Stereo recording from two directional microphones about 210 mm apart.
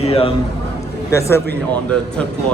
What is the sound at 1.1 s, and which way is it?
Speech, 15° left (ahead or behind).